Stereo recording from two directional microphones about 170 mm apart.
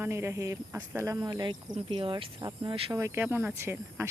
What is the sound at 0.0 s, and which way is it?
Speech, 15° right (ahead or behind).